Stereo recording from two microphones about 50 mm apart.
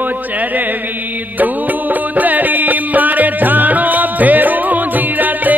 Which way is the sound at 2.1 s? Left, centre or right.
Right.